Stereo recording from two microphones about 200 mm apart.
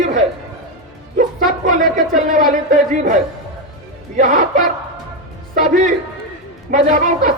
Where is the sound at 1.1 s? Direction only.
40° right (ahead or behind).